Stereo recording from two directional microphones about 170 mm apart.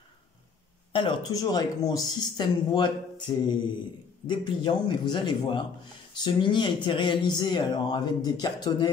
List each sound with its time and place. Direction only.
0.9 s speech: 25° left (ahead or behind)